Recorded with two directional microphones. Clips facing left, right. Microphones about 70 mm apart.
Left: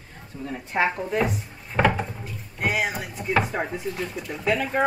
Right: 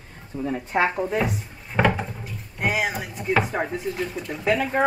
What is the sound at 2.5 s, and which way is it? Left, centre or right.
Speech, centre.